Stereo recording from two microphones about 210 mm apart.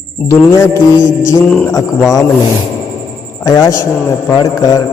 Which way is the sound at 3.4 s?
15° left (ahead or behind).